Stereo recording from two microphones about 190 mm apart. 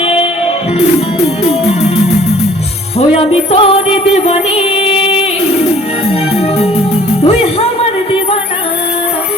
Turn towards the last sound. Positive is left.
turn(degrees=30)  # may be behind; listen again after turning